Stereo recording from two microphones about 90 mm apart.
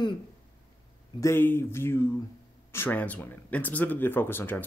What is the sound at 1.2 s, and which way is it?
Speech, 25° left (ahead or behind).